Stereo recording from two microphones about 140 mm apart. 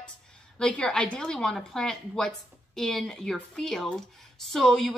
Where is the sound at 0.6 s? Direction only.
5° left (ahead or behind).